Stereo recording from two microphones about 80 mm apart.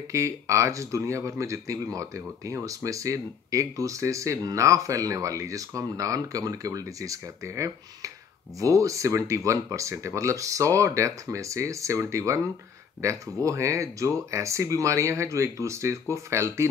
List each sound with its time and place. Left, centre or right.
0.1 s speech: right